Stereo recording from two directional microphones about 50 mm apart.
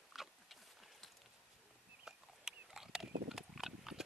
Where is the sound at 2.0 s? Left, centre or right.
Centre.